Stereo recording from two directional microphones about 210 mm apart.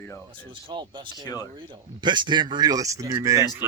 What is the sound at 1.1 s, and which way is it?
Speech, 15° left (ahead or behind).